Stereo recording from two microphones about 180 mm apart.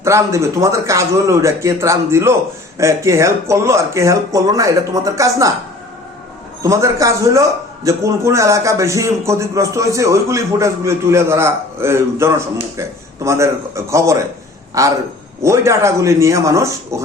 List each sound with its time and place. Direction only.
0.0 s a man's voice: 15° right (ahead or behind)
6.6 s a man's voice: 15° right (ahead or behind)